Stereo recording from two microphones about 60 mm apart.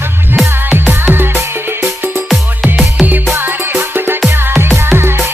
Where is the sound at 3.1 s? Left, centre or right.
Right.